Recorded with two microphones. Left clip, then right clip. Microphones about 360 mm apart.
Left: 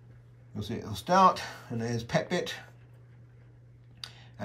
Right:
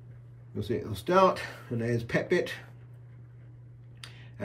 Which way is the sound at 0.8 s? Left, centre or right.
Centre.